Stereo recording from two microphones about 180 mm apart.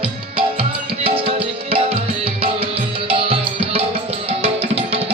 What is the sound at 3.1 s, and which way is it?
Music, 30° right (ahead or behind).